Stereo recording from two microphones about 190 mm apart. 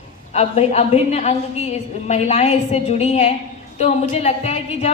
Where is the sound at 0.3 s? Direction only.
35° left (ahead or behind).